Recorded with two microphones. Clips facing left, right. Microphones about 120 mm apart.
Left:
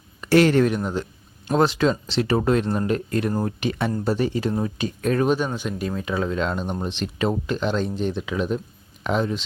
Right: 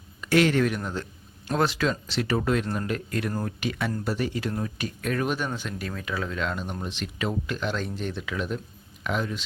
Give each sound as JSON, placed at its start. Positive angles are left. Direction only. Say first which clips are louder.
{"t": 0.2, "sound": "speech", "louder": "left 5 dB", "side_deg": 35}
{"t": 0.8, "sound": "speech", "louder": "left 6 dB", "side_deg": 20}
{"t": 5.5, "sound": "speech", "louder": "left 6 dB", "side_deg": 20}